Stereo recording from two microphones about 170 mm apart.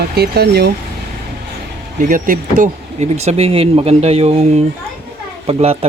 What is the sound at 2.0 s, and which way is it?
Speech, 50° right (ahead or behind).